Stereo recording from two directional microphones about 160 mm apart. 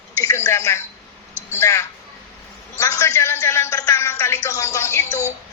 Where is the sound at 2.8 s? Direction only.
20° left (ahead or behind).